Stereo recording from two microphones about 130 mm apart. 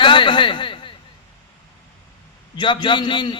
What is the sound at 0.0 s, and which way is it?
Speech, 40° left (ahead or behind).